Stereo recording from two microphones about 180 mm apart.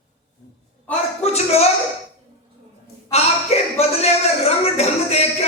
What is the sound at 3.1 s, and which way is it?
Speech, 35° left (ahead or behind).